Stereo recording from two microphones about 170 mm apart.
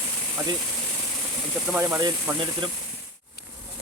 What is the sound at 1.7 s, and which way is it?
Speech, 15° right (ahead or behind).